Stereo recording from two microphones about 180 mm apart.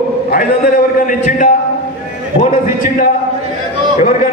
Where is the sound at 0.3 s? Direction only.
50° left (ahead or behind).